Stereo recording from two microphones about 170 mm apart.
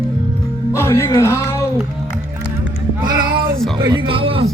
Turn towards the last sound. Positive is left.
turn(degrees=-30)  # may be behind; listen again after turning